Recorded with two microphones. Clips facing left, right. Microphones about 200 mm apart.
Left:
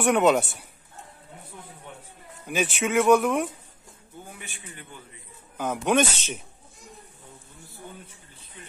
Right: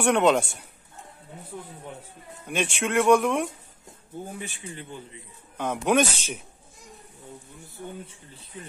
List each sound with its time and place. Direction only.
0.0 s speech: 5° left (ahead or behind)
2.4 s speech: 5° left (ahead or behind)
4.3 s a man's voice: 35° right (ahead or behind)
5.9 s speech: 5° right (ahead or behind)